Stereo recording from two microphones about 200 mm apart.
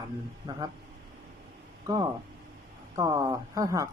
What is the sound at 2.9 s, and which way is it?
Speech, 15° right (ahead or behind).